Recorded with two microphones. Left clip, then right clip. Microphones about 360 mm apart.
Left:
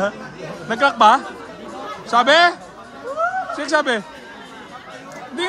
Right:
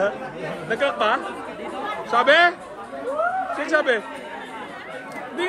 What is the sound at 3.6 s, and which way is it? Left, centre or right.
Speech, centre.